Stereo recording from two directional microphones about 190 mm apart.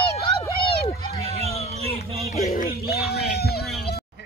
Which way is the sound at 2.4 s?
50° left (ahead or behind).